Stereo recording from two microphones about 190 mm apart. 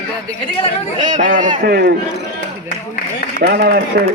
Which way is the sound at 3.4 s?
55° right (ahead or behind).